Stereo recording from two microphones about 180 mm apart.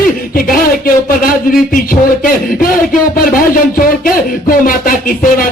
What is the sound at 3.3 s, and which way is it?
Speech, 50° left (ahead or behind).